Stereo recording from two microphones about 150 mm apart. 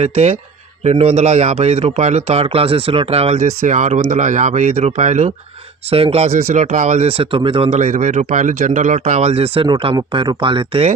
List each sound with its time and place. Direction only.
0.0 s a man's voice: 40° right (ahead or behind)
9.6 s speech: 30° right (ahead or behind)